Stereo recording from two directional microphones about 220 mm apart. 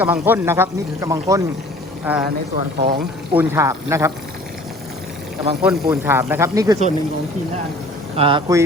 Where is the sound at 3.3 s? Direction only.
10° right (ahead or behind).